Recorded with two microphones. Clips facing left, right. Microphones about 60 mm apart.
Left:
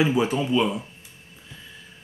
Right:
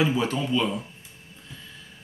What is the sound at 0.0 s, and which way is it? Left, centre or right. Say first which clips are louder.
Speech: left 3 dB; centre.